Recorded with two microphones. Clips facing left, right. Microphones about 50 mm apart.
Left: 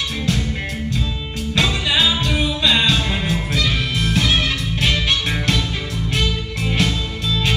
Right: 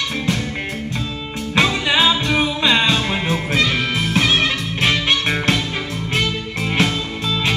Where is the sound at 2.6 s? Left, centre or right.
Right.